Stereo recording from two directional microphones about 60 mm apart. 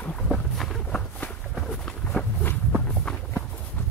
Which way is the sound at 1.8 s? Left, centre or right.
Centre.